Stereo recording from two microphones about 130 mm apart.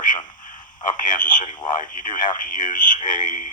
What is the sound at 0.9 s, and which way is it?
Speech, 85° left.